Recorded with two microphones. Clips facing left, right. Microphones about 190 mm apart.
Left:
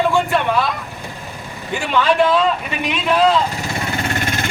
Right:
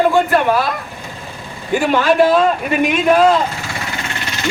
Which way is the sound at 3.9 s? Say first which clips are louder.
Left 4 dB; 40° left (ahead or behind).